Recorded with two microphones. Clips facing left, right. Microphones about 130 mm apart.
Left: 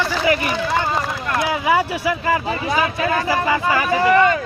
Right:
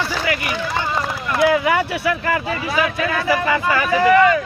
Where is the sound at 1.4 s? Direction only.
20° left (ahead or behind).